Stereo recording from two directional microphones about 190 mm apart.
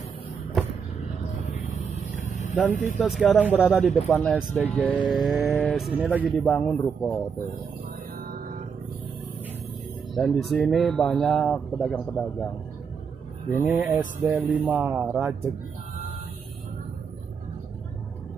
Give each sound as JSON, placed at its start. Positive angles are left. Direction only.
{"t": 2.1, "sound": "vehicle", "side_deg": 40}
{"t": 3.0, "sound": "speech", "side_deg": 0}
{"t": 8.2, "sound": "music", "side_deg": -50}
{"t": 10.1, "sound": "speech", "side_deg": 0}
{"t": 13.6, "sound": "speech", "side_deg": -5}